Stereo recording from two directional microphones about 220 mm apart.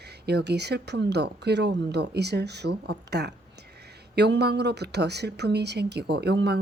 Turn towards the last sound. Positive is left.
turn(degrees=-50)  # may be behind; listen again after turning